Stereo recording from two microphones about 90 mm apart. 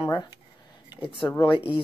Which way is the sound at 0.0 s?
55° left (ahead or behind).